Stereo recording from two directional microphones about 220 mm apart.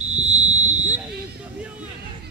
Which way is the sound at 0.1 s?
30° right (ahead or behind).